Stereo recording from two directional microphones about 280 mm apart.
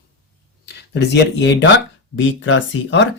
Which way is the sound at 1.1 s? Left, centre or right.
Left.